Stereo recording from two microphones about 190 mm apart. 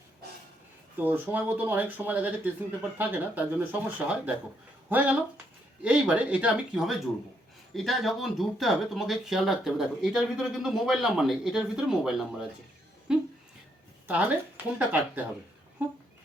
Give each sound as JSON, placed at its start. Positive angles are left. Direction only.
{"t": 0.9, "sound": "speech", "side_deg": -10}
{"t": 13.1, "sound": "a sound", "side_deg": -5}
{"t": 14.1, "sound": "speech", "side_deg": -10}